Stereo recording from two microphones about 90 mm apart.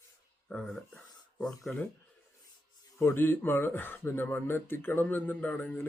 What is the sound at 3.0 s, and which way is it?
Speech, 25° left (ahead or behind).